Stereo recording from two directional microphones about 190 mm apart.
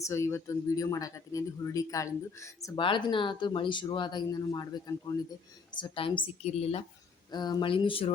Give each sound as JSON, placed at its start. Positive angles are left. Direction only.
{"t": 0.0, "sound": "speech", "side_deg": 15}
{"t": 7.3, "sound": "speech", "side_deg": 20}